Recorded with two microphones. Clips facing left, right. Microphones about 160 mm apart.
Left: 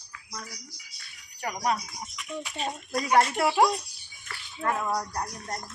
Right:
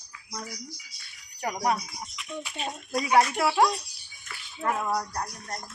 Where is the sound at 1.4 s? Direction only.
15° right (ahead or behind).